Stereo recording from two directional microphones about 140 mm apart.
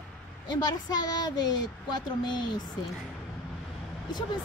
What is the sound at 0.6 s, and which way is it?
A woman's voice, 30° left (ahead or behind).